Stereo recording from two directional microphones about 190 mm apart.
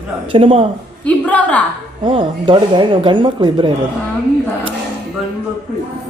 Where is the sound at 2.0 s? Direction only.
25° right (ahead or behind).